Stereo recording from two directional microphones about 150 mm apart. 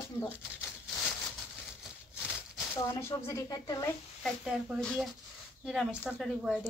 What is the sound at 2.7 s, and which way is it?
Speech, 20° left (ahead or behind).